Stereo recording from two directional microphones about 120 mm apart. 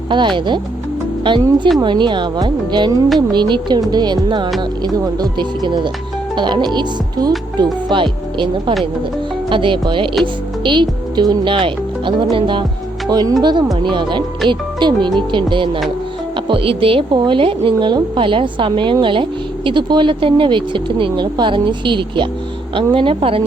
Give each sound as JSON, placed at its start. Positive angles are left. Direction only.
{"t": 0.1, "sound": "speech", "side_deg": -40}
{"t": 13.1, "sound": "speech", "side_deg": -35}